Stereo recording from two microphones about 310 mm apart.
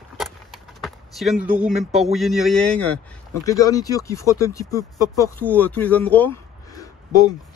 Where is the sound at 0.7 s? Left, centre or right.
Centre.